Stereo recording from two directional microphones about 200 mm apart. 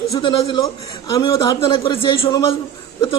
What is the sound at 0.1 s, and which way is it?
A man's voice, 20° left (ahead or behind).